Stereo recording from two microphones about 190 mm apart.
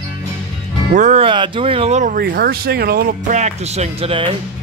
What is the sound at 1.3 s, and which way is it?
Speech, 25° right (ahead or behind).